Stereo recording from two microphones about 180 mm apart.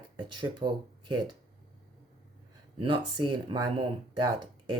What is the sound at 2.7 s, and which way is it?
Speech, 25° right (ahead or behind).